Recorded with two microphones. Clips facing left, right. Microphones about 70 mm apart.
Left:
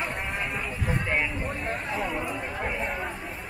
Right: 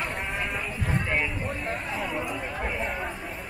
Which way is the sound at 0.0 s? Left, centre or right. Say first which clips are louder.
Even; centre.